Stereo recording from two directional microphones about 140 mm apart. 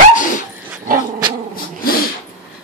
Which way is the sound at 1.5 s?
90° left.